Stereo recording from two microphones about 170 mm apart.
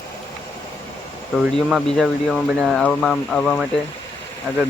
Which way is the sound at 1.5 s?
Centre (ahead or behind).